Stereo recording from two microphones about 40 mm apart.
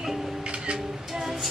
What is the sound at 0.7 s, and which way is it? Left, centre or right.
Music, centre.